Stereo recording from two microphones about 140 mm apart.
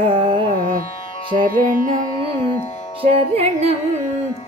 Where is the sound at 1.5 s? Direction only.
90° right.